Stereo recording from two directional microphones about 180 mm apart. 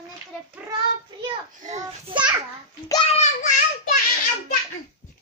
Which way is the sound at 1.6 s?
40° right (ahead or behind).